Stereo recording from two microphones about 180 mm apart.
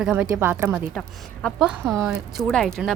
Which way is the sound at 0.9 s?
5° left (ahead or behind).